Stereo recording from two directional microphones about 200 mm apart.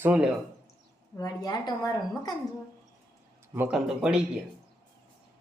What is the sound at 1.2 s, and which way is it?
A woman's voice, 20° left (ahead or behind).